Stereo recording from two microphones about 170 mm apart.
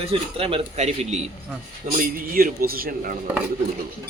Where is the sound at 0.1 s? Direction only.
35° right (ahead or behind).